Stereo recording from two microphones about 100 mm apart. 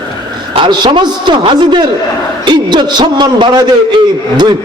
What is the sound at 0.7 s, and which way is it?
A man's voice, 50° right (ahead or behind).